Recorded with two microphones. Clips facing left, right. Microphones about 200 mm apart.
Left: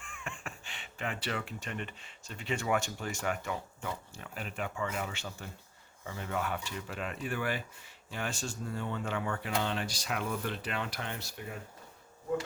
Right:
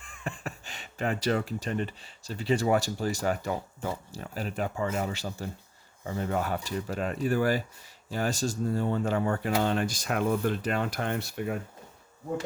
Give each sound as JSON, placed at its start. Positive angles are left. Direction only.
{"t": 0.0, "sound": "speech", "side_deg": -35}